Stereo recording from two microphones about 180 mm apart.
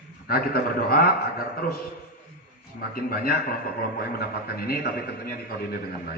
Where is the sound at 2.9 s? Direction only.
55° left (ahead or behind).